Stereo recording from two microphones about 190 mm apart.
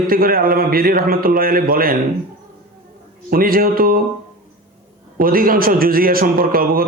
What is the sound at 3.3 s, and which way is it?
Speech, 50° right (ahead or behind).